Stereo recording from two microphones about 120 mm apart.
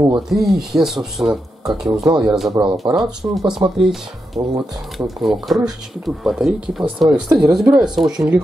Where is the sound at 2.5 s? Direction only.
35° right (ahead or behind).